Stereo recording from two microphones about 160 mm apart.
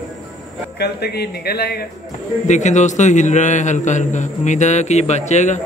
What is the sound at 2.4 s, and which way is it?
A man's voice, 45° left (ahead or behind).